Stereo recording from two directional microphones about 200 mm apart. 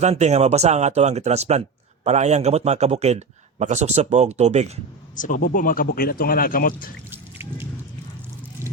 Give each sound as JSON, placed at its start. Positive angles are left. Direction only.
{"t": 0.0, "sound": "a man's voice", "side_deg": -35}
{"t": 5.1, "sound": "speech", "side_deg": 40}
{"t": 7.1, "sound": "drip", "side_deg": -10}